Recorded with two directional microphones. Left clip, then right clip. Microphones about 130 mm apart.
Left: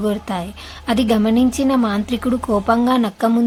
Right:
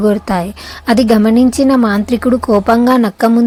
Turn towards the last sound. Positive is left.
turn(degrees=-50)  # may be behind; listen again after turning